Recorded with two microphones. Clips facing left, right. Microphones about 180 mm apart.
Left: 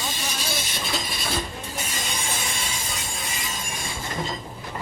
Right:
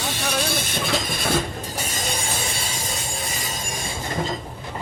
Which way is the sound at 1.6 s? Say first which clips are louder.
Right 3 dB; 35° right (ahead or behind).